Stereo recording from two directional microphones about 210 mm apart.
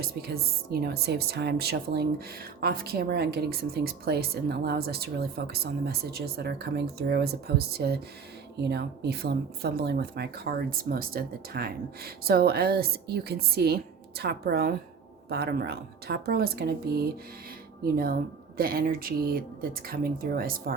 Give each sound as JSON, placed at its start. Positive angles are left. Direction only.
{"t": 0.0, "sound": "speech", "side_deg": -45}